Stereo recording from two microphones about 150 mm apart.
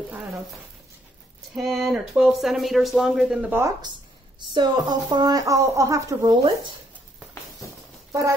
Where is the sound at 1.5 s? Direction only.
Centre (ahead or behind).